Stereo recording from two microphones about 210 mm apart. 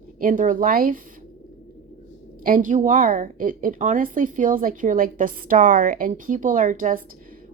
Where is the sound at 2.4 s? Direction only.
40° right (ahead or behind).